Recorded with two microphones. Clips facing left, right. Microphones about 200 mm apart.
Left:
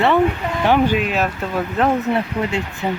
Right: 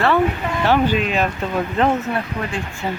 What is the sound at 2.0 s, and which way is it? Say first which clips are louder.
Speech: left 4 dB; 25° left (ahead or behind).